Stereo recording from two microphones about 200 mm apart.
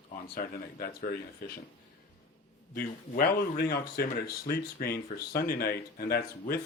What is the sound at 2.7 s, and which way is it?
Speech, 50° left (ahead or behind).